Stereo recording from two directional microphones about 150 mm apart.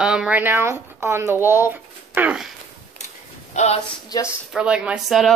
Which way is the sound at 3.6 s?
50° left (ahead or behind).